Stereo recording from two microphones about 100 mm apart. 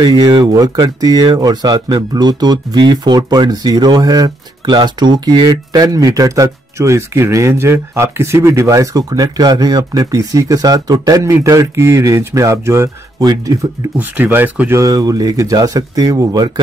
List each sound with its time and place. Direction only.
0.0 s speech: 45° right (ahead or behind); by 12.9 s 25° right (ahead or behind)
13.9 s speech: 20° right (ahead or behind)
14.8 s speech: 40° right (ahead or behind)